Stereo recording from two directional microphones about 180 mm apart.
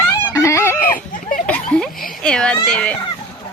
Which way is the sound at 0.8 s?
50° left (ahead or behind).